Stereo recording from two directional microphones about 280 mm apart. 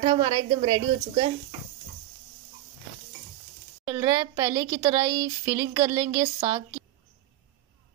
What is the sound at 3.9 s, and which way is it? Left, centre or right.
Speech, centre.